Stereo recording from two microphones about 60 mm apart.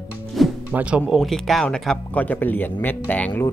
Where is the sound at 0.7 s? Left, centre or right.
Right.